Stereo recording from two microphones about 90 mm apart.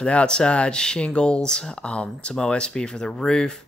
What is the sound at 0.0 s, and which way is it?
Speech, 10° left (ahead or behind).